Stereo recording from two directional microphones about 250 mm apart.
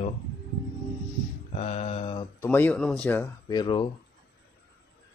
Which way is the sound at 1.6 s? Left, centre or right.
Left.